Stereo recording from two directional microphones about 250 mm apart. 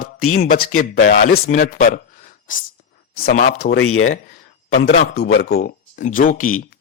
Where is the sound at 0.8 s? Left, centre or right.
Left.